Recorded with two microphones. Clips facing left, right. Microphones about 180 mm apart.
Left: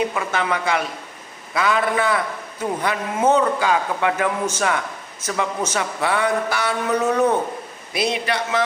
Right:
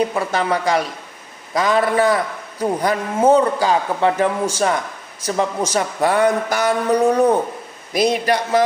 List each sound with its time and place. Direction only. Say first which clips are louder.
0.1 s a man's voice: right 3 dB; 35° right (ahead or behind)